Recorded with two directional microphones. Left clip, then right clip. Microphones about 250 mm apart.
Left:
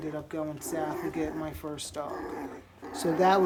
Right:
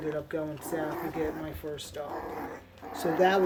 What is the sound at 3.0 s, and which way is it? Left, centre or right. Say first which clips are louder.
Speech: left 1 dB; centre.